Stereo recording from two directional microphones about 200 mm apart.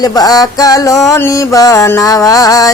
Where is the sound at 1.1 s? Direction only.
15° left (ahead or behind).